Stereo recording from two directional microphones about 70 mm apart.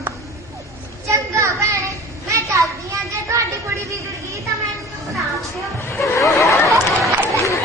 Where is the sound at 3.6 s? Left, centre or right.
Right.